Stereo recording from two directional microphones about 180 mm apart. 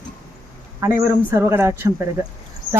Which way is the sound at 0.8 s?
15° right (ahead or behind).